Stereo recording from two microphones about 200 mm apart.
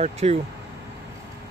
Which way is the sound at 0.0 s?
30° right (ahead or behind).